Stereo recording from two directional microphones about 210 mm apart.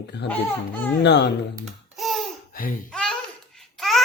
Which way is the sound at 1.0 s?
55° left (ahead or behind).